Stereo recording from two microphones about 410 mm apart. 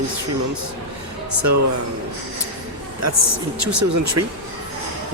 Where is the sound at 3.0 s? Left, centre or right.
Right.